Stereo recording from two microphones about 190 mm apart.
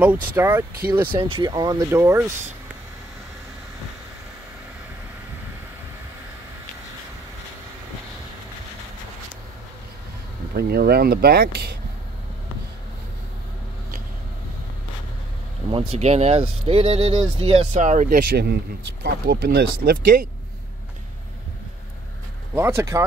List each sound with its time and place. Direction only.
0.0 s speech: 10° right (ahead or behind)
1.1 s speech: 25° right (ahead or behind)
10.5 s speech: 55° right (ahead or behind)
15.9 s speech: 35° right (ahead or behind)
17.7 s speech: 40° right (ahead or behind)
22.5 s speech: 15° right (ahead or behind)